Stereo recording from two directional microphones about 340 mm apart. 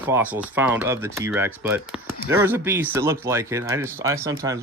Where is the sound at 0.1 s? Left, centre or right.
Centre.